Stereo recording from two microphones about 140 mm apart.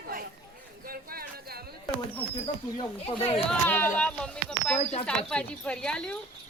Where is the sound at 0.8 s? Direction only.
90° right.